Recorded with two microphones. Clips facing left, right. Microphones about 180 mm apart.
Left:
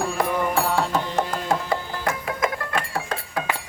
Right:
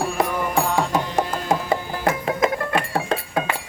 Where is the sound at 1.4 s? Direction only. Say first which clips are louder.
Right 2 dB; 25° right (ahead or behind).